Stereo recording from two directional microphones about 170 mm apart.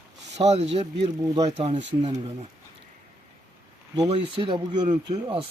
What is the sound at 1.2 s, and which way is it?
Speech, 20° right (ahead or behind).